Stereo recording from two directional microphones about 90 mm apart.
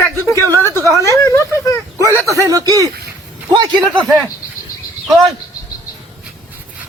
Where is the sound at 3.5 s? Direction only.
60° right (ahead or behind).